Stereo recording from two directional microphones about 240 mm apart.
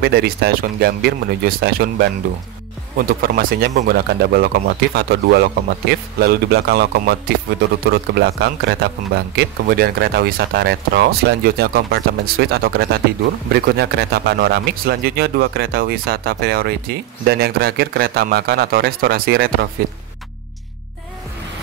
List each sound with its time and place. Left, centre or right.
0.0 s a man's voice: right